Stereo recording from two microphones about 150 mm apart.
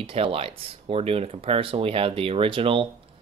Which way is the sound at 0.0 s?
35° right (ahead or behind).